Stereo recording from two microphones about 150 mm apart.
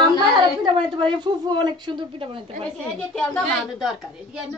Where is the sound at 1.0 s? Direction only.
30° right (ahead or behind).